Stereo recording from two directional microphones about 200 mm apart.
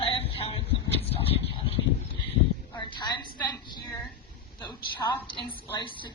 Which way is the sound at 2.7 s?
20° left (ahead or behind).